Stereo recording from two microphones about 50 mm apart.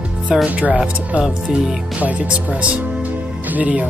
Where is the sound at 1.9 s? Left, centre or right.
Right.